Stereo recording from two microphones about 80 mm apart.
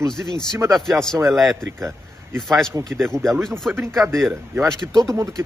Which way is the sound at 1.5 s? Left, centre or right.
Right.